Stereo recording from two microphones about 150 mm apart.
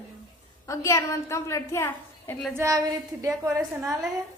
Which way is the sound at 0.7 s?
20° left (ahead or behind).